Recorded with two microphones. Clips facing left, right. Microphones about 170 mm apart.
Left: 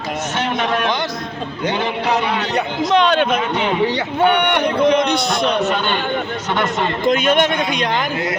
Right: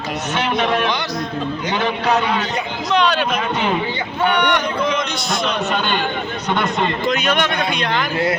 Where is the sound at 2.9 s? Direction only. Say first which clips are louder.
Left 2 dB; 50° left (ahead or behind).